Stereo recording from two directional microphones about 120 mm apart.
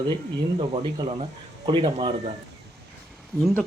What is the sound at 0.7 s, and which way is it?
Speech, 45° right (ahead or behind).